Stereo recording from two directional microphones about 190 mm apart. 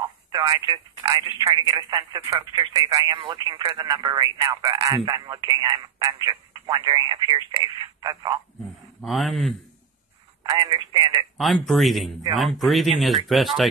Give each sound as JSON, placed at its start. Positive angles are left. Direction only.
{"t": 0.0, "sound": "speech", "side_deg": -20}
{"t": 9.0, "sound": "speech", "side_deg": 0}
{"t": 10.4, "sound": "speech", "side_deg": -20}
{"t": 11.3, "sound": "speech", "side_deg": 0}